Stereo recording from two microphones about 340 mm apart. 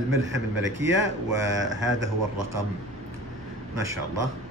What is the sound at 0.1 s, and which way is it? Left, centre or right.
Speech, right.